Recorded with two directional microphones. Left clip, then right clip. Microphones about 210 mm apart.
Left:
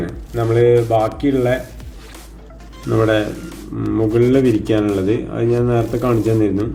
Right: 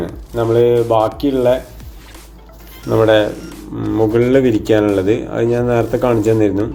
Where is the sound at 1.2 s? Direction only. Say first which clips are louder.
Right 3 dB; 15° right (ahead or behind).